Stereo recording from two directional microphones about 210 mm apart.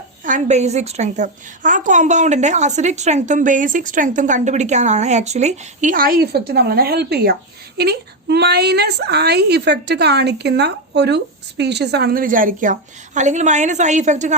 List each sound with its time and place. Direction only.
0.3 s a woman's voice: 35° right (ahead or behind)